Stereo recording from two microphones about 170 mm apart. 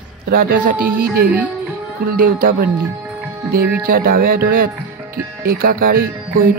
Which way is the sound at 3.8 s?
60° right (ahead or behind).